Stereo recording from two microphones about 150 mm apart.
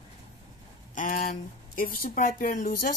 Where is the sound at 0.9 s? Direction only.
65° left (ahead or behind).